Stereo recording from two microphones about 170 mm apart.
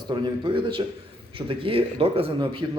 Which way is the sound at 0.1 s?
30° right (ahead or behind).